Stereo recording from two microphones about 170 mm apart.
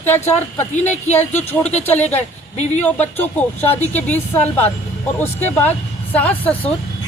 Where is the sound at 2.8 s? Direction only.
10° left (ahead or behind).